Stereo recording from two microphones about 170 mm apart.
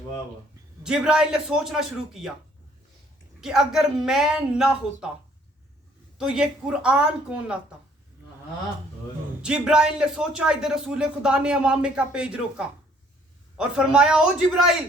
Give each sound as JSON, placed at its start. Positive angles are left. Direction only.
{"t": 0.9, "sound": "a man's voice", "side_deg": -5}
{"t": 3.4, "sound": "a man's voice", "side_deg": -5}
{"t": 6.1, "sound": "a man's voice", "side_deg": -5}
{"t": 9.4, "sound": "a man's voice", "side_deg": -5}